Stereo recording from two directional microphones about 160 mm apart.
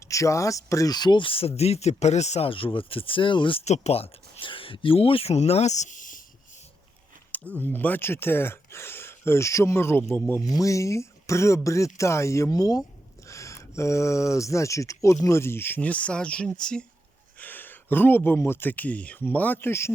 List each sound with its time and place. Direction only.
0.0 s speech: 20° left (ahead or behind)
3.6 s speech: 45° left (ahead or behind)
7.3 s speech: 10° left (ahead or behind)